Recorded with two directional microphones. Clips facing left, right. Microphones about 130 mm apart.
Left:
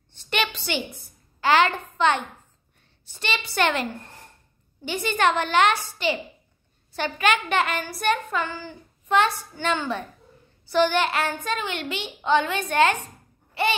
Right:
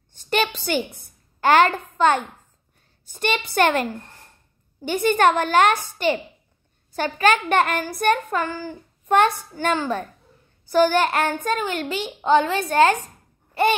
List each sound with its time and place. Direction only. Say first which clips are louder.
0.1 s a woman's voice: right 4 dB; 40° right (ahead or behind)